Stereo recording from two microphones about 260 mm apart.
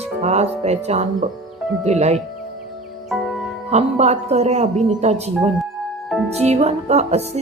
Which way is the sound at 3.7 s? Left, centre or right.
Right.